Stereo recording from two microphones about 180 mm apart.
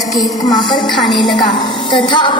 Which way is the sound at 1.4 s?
25° left (ahead or behind).